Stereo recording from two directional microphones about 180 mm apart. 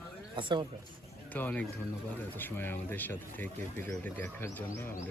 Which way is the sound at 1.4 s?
10° left (ahead or behind).